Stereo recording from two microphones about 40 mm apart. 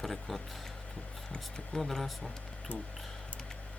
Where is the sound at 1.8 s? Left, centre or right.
Centre.